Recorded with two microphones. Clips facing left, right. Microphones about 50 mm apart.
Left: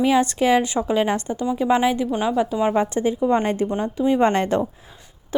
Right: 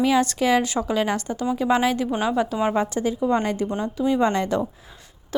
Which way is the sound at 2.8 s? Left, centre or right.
Left.